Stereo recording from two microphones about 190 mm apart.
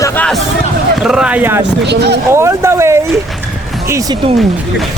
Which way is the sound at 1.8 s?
60° right (ahead or behind).